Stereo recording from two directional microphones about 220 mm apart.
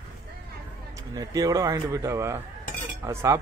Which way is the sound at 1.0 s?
15° right (ahead or behind).